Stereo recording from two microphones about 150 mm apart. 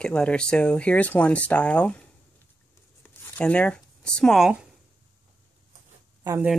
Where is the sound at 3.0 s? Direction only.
10° left (ahead or behind).